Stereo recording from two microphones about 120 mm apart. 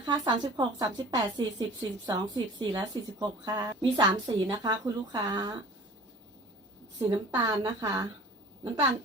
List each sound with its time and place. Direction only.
0.0 s a woman's voice: 35° right (ahead or behind)
7.1 s a woman's voice: 40° right (ahead or behind)